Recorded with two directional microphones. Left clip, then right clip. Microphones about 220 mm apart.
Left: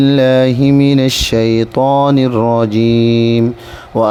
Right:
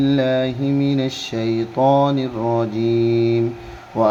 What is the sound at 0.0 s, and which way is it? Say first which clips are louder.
Speech: left 8 dB; 45° left (ahead or behind).